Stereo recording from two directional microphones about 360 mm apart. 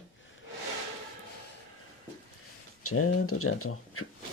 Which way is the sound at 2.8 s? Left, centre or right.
Left.